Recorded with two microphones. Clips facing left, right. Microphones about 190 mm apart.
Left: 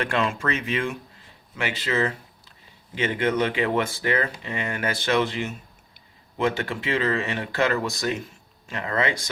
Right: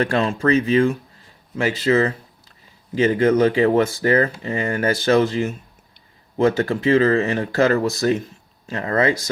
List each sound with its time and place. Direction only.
0.0 s speech: 35° right (ahead or behind)